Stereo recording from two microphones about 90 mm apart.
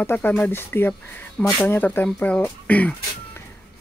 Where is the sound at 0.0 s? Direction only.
20° left (ahead or behind).